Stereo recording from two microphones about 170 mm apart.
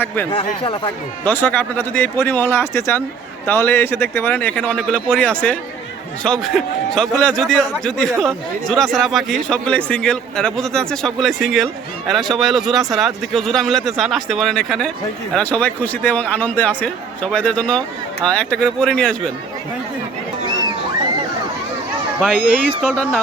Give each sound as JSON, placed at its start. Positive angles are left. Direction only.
{"t": 0.3, "sound": "speech", "side_deg": 30}
{"t": 1.2, "sound": "a man's voice", "side_deg": 10}
{"t": 22.4, "sound": "speech", "side_deg": -60}